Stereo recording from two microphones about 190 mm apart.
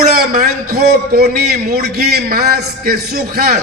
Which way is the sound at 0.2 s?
55° right (ahead or behind).